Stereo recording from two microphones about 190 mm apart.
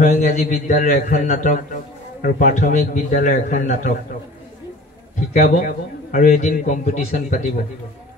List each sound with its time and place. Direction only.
0.0 s a man's voice: 40° left (ahead or behind)
5.3 s a man's voice: 40° left (ahead or behind)